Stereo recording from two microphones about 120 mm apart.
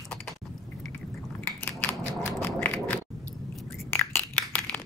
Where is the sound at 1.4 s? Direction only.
15° left (ahead or behind).